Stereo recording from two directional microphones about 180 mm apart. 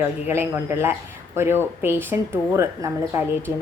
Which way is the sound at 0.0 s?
15° right (ahead or behind).